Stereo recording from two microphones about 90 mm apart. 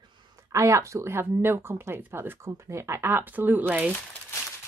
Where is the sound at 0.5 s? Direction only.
35° right (ahead or behind).